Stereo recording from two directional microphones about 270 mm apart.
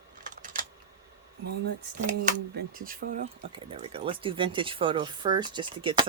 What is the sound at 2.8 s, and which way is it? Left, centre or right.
Speech, right.